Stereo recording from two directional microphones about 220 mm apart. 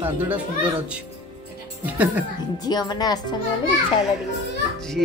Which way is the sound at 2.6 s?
20° left (ahead or behind).